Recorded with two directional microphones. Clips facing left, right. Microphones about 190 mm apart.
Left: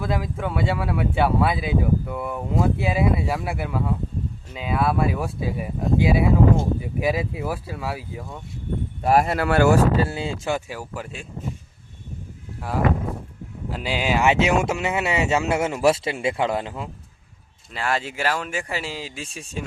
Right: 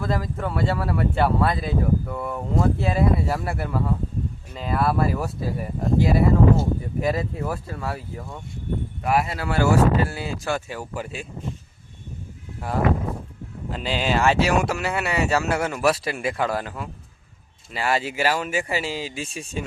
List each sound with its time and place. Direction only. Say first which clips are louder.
0.0 s speech: even; centre (ahead or behind)
9.0 s speech: left 4 dB; 40° left (ahead or behind)
9.3 s speech: left 5 dB; 60° left (ahead or behind)
10.1 s speech: left 1 dB; 25° left (ahead or behind)
10.7 s speech: right 1 dB; centre (ahead or behind)
13.7 s speech: even; 10° left (ahead or behind)
17.7 s speech: right 2 dB; 5° right (ahead or behind)